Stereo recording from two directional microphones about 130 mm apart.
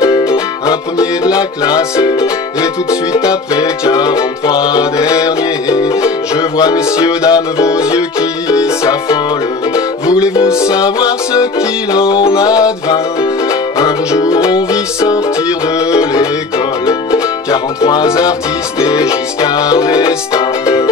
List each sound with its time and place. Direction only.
0.0 s music: 25° left (ahead or behind)
1.3 s music: 30° left (ahead or behind)
9.8 s music: 25° left (ahead or behind)
16.8 s music: 25° left (ahead or behind)
19.4 s music: 30° left (ahead or behind)